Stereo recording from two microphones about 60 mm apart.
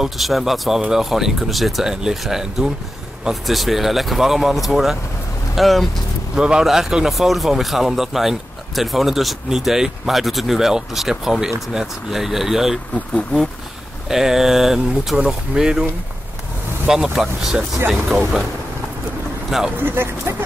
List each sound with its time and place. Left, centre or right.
0.0 s speech: centre
6.3 s speech: centre
13.1 s speech: centre
14.0 s speech: centre
19.8 s speech: right